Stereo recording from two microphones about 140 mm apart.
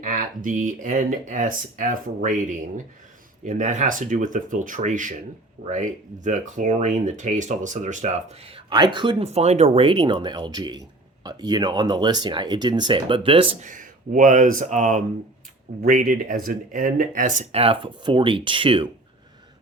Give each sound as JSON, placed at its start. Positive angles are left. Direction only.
{"t": 0.0, "sound": "speech", "side_deg": -65}
{"t": 8.4, "sound": "speech", "side_deg": -35}
{"t": 13.6, "sound": "speech", "side_deg": -70}
{"t": 15.8, "sound": "speech", "side_deg": -75}